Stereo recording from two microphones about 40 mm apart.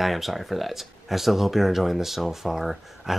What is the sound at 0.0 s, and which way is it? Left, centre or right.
Speech, centre.